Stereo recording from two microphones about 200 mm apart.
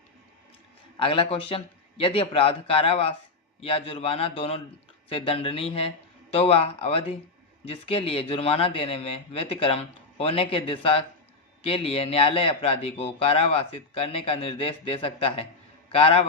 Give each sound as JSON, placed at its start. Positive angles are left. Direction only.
{"t": 0.9, "sound": "speech", "side_deg": 25}